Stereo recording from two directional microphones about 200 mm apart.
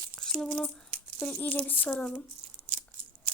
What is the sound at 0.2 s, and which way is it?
Speech, centre (ahead or behind).